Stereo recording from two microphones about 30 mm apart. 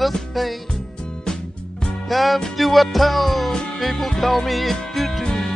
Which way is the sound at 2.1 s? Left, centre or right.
Centre.